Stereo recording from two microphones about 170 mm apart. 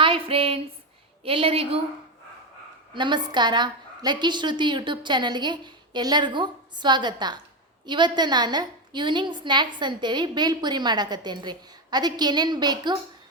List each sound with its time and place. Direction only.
0.0 s a sound: 30° right (ahead or behind)
1.2 s a woman's voice: 30° right (ahead or behind)
2.9 s a woman's voice: 25° right (ahead or behind)